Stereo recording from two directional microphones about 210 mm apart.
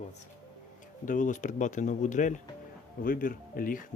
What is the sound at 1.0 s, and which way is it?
Speech, 40° left (ahead or behind).